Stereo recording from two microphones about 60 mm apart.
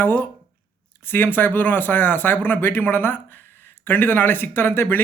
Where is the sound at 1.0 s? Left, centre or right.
Left.